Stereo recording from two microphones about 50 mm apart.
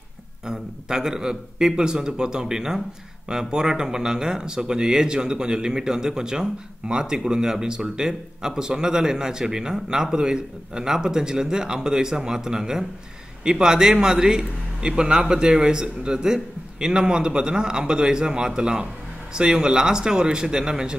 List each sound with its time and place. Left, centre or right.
0.5 s speech: centre